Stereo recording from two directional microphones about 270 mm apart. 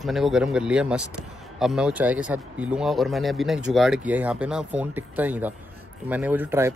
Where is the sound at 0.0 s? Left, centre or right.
Centre.